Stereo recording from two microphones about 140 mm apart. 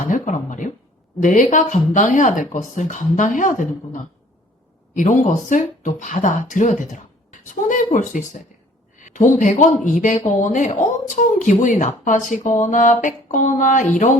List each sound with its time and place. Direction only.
0.1 s speech: 65° left (ahead or behind)
4.9 s speech: 60° left (ahead or behind)